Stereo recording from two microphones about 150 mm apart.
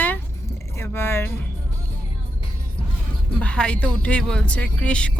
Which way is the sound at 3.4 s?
5° left (ahead or behind).